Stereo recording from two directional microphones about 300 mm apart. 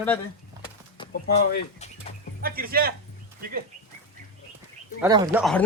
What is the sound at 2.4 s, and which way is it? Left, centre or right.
Speech, right.